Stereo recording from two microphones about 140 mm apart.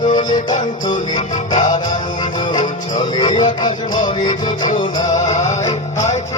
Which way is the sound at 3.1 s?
35° left (ahead or behind).